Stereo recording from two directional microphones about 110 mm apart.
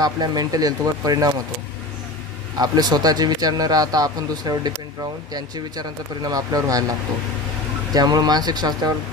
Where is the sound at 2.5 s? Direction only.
35° right (ahead or behind).